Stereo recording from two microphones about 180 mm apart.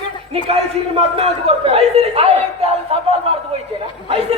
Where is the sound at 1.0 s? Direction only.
35° right (ahead or behind).